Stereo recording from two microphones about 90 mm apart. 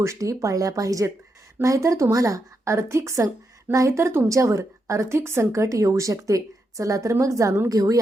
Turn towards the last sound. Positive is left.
turn(degrees=-40)  # may be behind; listen again after turning